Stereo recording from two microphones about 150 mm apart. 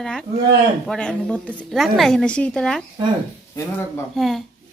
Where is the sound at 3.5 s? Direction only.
15° left (ahead or behind).